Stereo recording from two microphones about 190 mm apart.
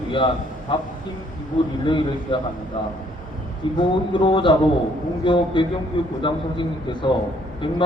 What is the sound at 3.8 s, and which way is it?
A man's voice, 25° left (ahead or behind).